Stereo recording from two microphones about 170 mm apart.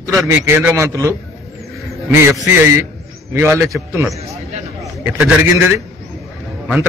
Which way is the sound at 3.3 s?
15° right (ahead or behind).